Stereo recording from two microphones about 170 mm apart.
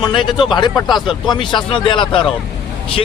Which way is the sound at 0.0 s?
25° left (ahead or behind).